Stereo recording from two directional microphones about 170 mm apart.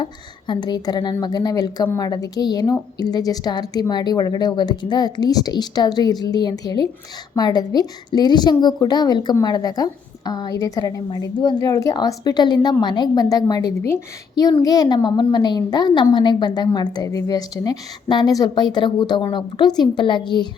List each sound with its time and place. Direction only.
0.0 s a woman's voice: 25° left (ahead or behind)